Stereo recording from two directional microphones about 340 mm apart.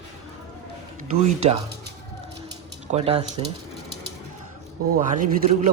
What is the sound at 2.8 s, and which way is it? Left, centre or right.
Speech, centre.